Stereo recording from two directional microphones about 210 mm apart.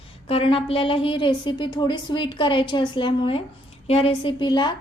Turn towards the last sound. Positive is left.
turn(degrees=20)  # may be behind; listen again after turning